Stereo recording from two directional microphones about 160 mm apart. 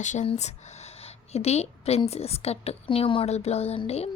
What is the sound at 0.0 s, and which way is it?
A woman's voice, 50° left (ahead or behind).